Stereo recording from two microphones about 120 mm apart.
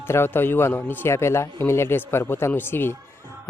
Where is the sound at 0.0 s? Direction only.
20° left (ahead or behind).